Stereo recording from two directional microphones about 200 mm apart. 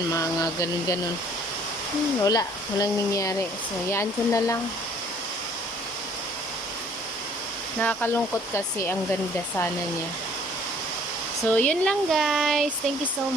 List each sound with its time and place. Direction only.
0.1 s speech: 15° left (ahead or behind)
2.2 s speech: 20° left (ahead or behind)
7.8 s speech: 10° left (ahead or behind)
11.4 s speech: 10° left (ahead or behind)